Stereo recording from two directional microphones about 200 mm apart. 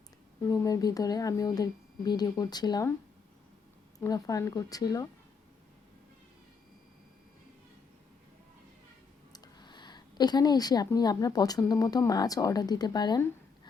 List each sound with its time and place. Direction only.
0.4 s speech: 15° left (ahead or behind)
3.9 s speech: 15° left (ahead or behind)
9.3 s a woman's voice: 20° left (ahead or behind)